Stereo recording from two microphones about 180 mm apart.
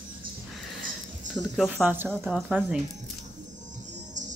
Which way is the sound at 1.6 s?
5° right (ahead or behind).